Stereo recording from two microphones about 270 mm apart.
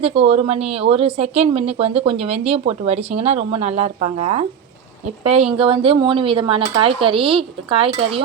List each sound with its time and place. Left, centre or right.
0.0 s speech: right